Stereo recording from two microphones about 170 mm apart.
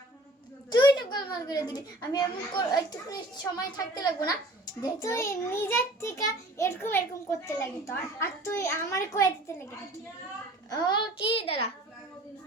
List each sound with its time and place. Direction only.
0.7 s a child's voice: 25° left (ahead or behind)
10.7 s a child's voice: 25° left (ahead or behind)